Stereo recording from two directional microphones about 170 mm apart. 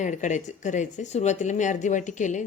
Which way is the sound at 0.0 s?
45° left (ahead or behind).